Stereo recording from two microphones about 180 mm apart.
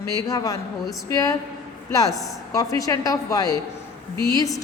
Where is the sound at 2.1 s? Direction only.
Centre (ahead or behind).